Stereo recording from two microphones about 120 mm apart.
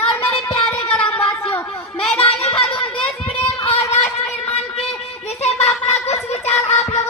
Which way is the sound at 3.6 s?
65° left (ahead or behind).